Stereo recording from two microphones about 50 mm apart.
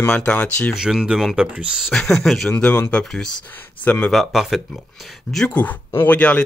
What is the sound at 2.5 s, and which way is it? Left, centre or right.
Speech, left.